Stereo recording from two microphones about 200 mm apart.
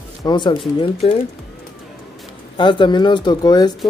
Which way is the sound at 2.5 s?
25° left (ahead or behind).